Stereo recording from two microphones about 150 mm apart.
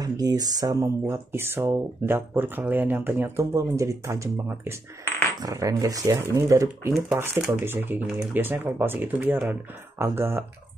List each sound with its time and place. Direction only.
0.0 s speech: 25° right (ahead or behind)